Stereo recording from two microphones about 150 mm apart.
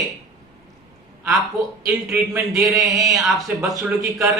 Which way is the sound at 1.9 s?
5° right (ahead or behind).